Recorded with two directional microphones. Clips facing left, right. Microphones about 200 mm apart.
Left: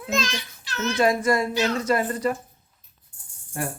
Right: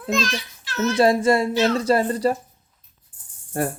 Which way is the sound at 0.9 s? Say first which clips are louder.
Right 4 dB; 30° right (ahead or behind).